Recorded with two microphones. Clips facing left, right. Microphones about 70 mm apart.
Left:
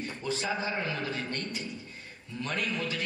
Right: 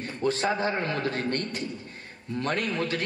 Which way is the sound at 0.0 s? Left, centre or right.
Right.